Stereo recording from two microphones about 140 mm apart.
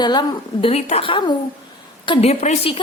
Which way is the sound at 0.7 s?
45° left (ahead or behind).